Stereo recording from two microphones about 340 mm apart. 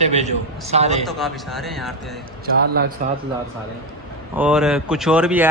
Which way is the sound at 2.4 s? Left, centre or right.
Right.